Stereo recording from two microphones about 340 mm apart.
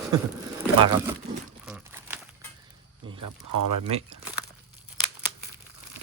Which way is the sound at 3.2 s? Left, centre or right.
Right.